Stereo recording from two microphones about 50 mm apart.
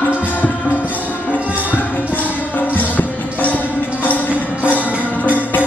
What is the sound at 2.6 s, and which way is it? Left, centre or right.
Music, left.